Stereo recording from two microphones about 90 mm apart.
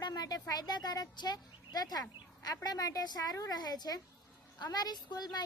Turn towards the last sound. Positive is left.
turn(degrees=50)  # may be behind; listen again after turning